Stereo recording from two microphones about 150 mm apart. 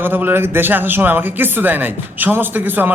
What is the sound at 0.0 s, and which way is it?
Speech, 15° right (ahead or behind).